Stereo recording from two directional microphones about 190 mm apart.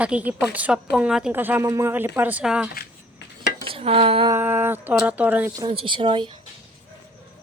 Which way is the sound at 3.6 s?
30° right (ahead or behind).